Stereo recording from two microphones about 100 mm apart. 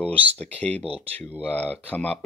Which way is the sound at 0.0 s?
15° left (ahead or behind).